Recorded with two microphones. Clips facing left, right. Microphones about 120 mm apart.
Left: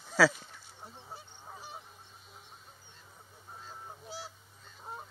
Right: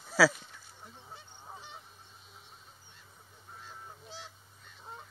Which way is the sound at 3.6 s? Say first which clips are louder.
Left 3 dB; 35° left (ahead or behind).